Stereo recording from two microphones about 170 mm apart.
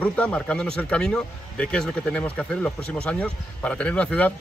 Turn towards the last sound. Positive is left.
turn(degrees=5)  # may be behind; listen again after turning